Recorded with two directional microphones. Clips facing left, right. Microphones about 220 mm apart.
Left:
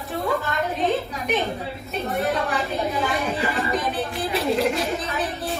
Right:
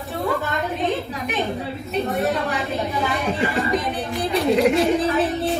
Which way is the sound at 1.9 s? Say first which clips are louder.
Right 2 dB; centre (ahead or behind).